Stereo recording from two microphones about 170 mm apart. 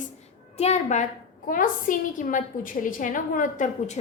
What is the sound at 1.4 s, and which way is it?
A woman's voice, 55° left (ahead or behind).